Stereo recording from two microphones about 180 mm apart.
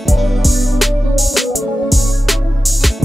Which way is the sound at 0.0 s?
Centre (ahead or behind).